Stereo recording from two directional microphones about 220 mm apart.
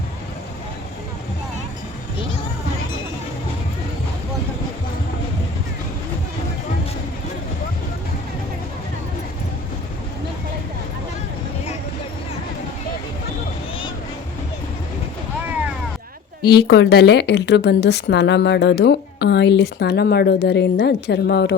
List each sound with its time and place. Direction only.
16.6 s a woman's voice: 50° left (ahead or behind)